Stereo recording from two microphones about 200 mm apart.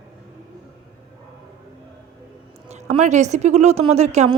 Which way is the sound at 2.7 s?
35° right (ahead or behind).